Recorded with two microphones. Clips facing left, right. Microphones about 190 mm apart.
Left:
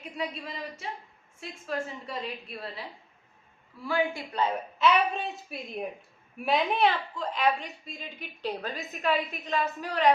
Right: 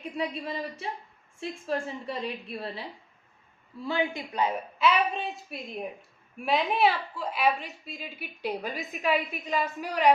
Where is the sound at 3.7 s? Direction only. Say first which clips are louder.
Even; 25° right (ahead or behind).